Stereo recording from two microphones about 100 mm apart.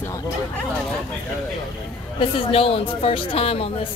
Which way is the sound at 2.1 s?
65° left (ahead or behind).